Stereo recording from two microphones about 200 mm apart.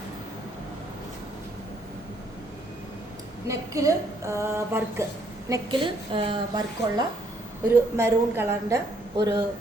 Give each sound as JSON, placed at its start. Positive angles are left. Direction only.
{"t": 3.4, "sound": "a woman's voice", "side_deg": -15}
{"t": 5.5, "sound": "a woman's voice", "side_deg": -25}